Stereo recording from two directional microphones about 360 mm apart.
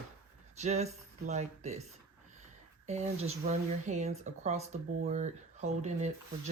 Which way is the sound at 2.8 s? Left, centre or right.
Centre.